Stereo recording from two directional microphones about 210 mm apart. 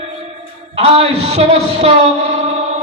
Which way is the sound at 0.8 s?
30° right (ahead or behind).